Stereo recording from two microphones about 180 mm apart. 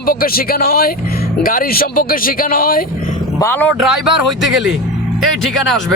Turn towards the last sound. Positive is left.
turn(degrees=0)  # may be behind; listen again after turning